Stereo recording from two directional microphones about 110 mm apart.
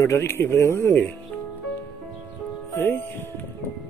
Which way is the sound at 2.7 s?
20° left (ahead or behind).